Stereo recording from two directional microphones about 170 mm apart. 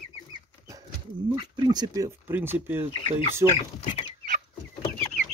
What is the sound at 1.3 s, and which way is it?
Speech, 25° right (ahead or behind).